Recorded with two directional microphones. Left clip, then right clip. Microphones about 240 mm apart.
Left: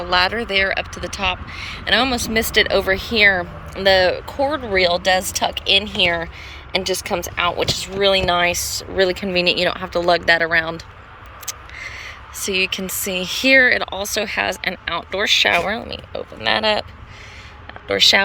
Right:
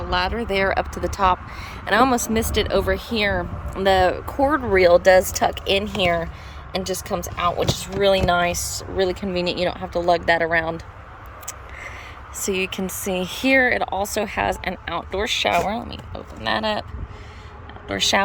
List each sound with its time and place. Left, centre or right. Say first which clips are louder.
0.0 s speech: left 5 dB; centre
11.8 s speech: left 4 dB; centre
17.8 s speech: left 6 dB; centre